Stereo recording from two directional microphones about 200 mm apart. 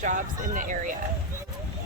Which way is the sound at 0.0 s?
40° right (ahead or behind).